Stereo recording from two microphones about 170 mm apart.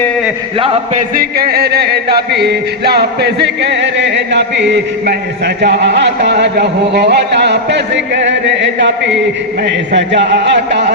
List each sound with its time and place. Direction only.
1.1 s music: 60° right (ahead or behind); by 5.1 s 90° right
5.6 s speech: 85° right